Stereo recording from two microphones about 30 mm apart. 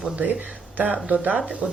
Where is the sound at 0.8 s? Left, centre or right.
Right.